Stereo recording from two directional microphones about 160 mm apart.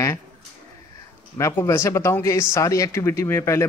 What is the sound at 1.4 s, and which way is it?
Speech, 15° left (ahead or behind).